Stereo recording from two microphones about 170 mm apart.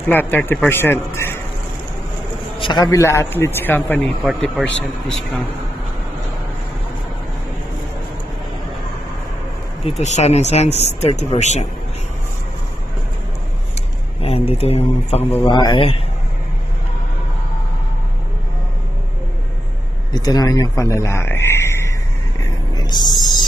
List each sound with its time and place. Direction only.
0.1 s a man's voice: 10° left (ahead or behind)
2.6 s a man's voice: 25° left (ahead or behind); by 5.4 s 5° left (ahead or behind)
9.8 s speech: 40° left (ahead or behind)
14.2 s speech: 35° left (ahead or behind)
15.4 s a man's voice: 25° left (ahead or behind)
20.1 s speech: 25° left (ahead or behind)
22.8 s a sound: 25° left (ahead or behind)